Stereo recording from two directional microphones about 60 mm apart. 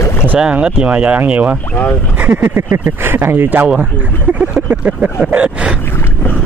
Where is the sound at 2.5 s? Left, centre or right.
Right.